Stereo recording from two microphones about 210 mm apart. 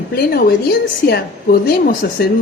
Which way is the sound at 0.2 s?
50° left (ahead or behind).